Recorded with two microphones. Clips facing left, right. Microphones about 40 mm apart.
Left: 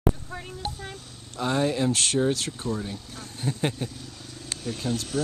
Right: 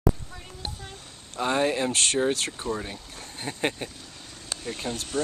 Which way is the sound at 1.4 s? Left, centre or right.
Centre.